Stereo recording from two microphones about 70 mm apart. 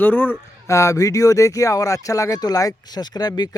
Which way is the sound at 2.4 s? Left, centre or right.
Left.